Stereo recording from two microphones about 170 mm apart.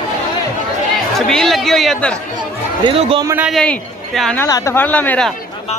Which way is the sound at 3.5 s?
5° left (ahead or behind).